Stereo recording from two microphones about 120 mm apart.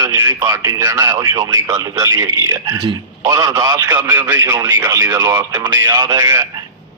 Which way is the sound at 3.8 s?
20° right (ahead or behind).